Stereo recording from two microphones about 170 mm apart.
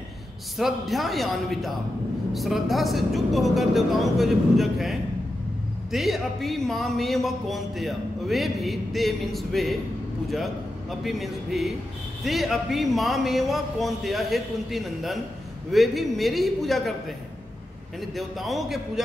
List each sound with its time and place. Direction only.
0.6 s speech: centre (ahead or behind)
18.1 s speech: centre (ahead or behind)